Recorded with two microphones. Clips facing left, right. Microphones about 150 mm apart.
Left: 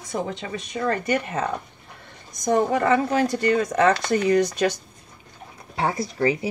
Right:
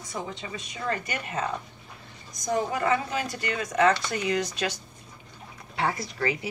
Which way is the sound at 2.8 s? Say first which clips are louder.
Left 7 dB; 45° left (ahead or behind).